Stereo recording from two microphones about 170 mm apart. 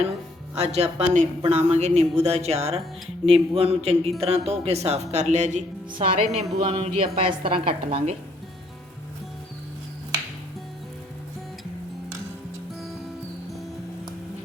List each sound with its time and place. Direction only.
0.5 s a woman's voice: 40° right (ahead or behind)